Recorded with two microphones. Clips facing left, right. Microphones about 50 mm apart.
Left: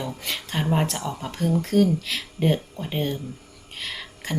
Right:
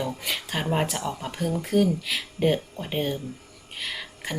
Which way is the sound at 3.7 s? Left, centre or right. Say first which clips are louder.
Even; centre.